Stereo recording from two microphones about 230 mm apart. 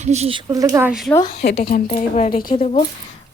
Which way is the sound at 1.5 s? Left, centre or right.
Left.